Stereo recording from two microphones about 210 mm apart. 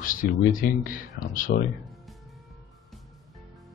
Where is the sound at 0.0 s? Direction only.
40° left (ahead or behind).